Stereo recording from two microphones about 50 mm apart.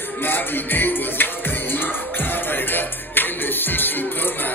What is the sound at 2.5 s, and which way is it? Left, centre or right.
Music, left.